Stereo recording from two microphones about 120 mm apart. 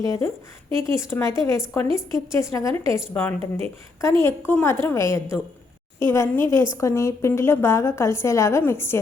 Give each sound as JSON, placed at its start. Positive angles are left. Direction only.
{"t": 0.0, "sound": "a woman's voice", "side_deg": 25}